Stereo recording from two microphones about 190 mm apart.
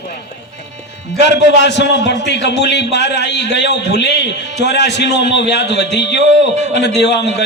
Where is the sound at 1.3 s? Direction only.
65° left (ahead or behind).